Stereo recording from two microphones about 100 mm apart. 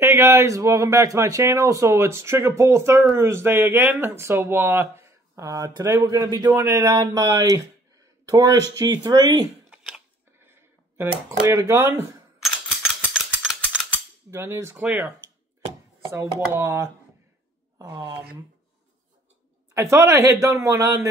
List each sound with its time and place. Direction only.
0.0 s speech: 25° right (ahead or behind)
6.9 s speech: 40° right (ahead or behind)
9.7 s a sound: 5° right (ahead or behind)
10.4 s speech: 25° right (ahead or behind)
13.1 s a sound: 10° right (ahead or behind)
14.3 s speech: 25° right (ahead or behind)
16.1 s speech: 25° right (ahead or behind)
19.7 s speech: 30° right (ahead or behind)